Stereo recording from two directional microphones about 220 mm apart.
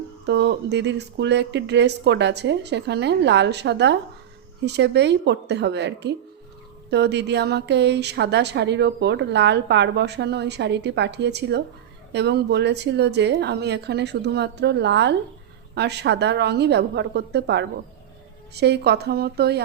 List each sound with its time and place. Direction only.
0.3 s a woman's voice: 50° right (ahead or behind)